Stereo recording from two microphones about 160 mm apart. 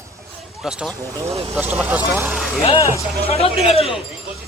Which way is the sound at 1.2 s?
40° right (ahead or behind).